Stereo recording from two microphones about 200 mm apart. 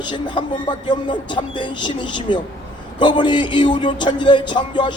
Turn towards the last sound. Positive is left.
turn(degrees=25)  # may be behind; listen again after turning